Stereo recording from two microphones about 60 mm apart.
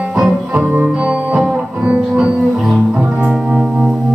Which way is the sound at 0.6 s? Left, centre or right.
Right.